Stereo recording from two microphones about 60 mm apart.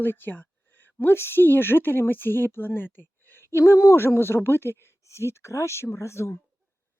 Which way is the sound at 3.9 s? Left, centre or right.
Left.